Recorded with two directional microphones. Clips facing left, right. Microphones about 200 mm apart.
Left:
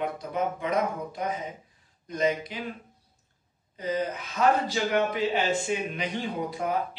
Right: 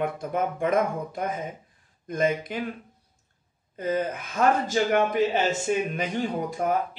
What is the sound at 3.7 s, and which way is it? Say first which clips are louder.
Speech: right 2 dB; 50° right (ahead or behind).